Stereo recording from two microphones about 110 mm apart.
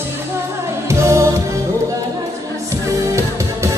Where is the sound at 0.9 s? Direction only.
25° right (ahead or behind).